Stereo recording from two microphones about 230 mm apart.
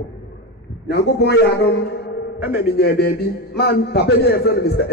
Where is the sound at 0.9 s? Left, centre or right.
Left.